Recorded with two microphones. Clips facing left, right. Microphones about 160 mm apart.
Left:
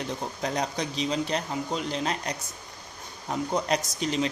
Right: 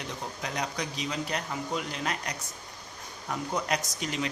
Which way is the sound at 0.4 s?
35° left (ahead or behind).